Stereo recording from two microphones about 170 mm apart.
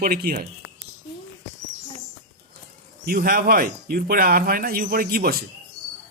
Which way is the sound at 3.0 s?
60° right (ahead or behind).